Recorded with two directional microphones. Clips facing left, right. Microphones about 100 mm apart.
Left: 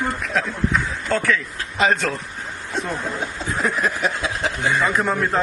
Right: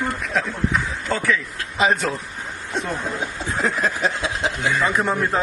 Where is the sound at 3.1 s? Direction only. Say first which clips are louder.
Even; 25° right (ahead or behind).